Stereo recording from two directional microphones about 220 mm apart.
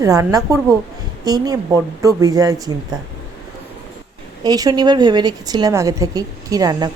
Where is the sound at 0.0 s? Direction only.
15° right (ahead or behind).